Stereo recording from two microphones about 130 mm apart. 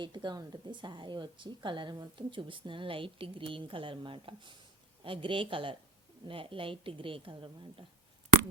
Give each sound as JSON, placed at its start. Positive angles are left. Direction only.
{"t": 0.0, "sound": "a woman's voice", "side_deg": -35}